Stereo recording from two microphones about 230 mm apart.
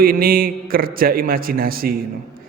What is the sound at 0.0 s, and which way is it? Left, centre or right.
Speech, right.